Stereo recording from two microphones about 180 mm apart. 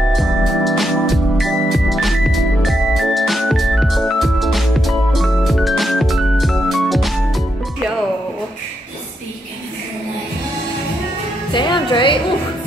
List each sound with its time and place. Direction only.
0.1 s organ: centre (ahead or behind)
11.5 s music: 25° left (ahead or behind)